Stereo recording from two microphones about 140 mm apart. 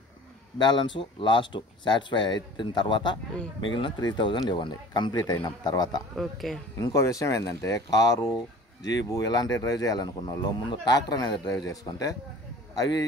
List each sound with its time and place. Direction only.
0.6 s speech: 30° left (ahead or behind)
6.1 s speech: centre (ahead or behind)
6.8 s speech: 25° left (ahead or behind)